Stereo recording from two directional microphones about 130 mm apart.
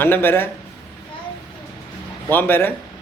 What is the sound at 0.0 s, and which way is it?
Speech, 15° left (ahead or behind).